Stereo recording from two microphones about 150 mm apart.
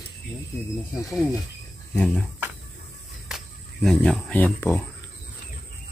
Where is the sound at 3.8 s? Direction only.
5° left (ahead or behind).